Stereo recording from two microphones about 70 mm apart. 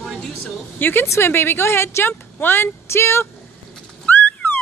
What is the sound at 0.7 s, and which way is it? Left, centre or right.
Speech, left.